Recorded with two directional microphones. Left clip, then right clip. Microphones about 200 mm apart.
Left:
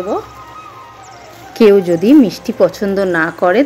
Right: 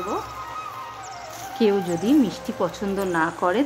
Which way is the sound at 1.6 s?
25° left (ahead or behind).